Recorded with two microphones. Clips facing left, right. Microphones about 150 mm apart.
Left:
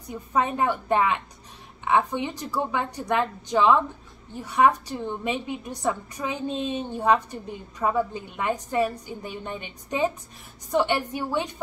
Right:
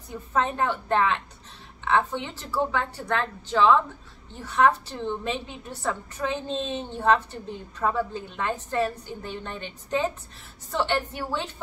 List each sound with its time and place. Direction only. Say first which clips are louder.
0.1 s a woman's voice: left 1 dB; 15° left (ahead or behind)